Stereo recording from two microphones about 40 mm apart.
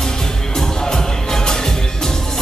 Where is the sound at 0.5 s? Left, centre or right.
Centre.